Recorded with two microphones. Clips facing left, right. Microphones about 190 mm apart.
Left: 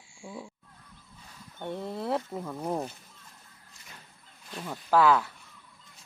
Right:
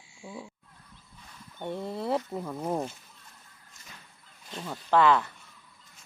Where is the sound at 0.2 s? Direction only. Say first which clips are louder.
Even; 5° right (ahead or behind).